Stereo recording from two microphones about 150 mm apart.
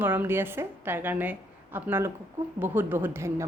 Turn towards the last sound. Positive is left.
turn(degrees=-15)  # may be behind; listen again after turning